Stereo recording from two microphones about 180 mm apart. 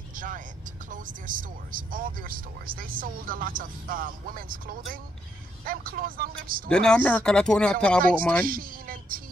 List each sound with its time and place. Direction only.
0.1 s vehicle: 50° right (ahead or behind)
0.8 s speech: 45° right (ahead or behind)
6.7 s speech: 5° left (ahead or behind)
8.0 s speech: 50° right (ahead or behind)